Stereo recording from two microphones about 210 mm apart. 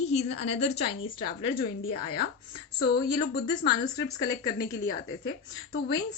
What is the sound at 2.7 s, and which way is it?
Speech, 50° left (ahead or behind).